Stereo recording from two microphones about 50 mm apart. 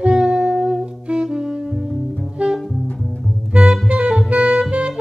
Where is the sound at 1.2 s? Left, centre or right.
Centre.